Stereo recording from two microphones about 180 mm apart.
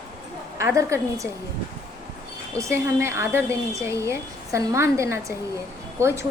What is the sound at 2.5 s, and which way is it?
A woman's voice, 15° right (ahead or behind).